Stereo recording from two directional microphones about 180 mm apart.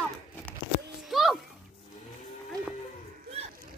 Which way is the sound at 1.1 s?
Centre (ahead or behind).